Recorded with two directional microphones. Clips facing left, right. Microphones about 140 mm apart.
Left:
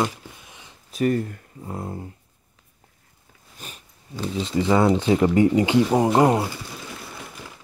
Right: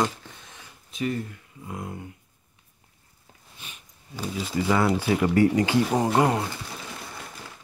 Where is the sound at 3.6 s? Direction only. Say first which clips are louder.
Left 5 dB; 40° left (ahead or behind).